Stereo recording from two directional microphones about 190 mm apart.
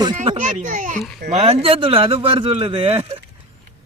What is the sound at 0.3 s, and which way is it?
A child's voice, 40° right (ahead or behind).